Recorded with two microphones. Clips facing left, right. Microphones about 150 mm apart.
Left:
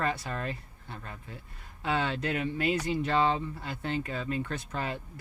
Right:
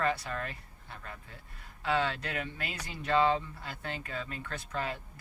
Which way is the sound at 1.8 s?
20° left (ahead or behind).